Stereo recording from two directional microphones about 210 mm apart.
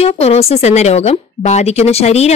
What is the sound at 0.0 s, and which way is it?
A woman's voice, 30° left (ahead or behind).